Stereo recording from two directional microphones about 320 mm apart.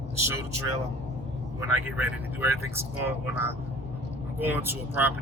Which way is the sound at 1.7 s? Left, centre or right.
Centre.